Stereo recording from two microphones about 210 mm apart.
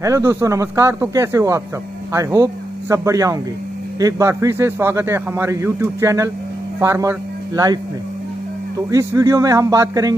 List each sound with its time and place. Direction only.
0.0 s a man's voice: 15° right (ahead or behind)